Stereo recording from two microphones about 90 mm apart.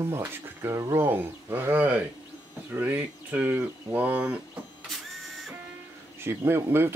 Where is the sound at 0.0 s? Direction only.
30° right (ahead or behind).